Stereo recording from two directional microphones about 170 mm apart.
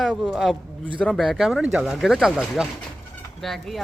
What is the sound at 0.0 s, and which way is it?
A man's voice, 5° right (ahead or behind).